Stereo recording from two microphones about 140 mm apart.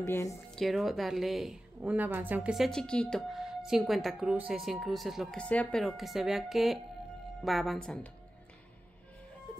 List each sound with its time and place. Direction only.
0.0 s a woman's voice: 20° left (ahead or behind)
0.6 s a woman's voice: centre (ahead or behind)